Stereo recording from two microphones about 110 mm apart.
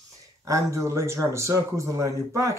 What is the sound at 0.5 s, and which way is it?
Speech, 25° right (ahead or behind).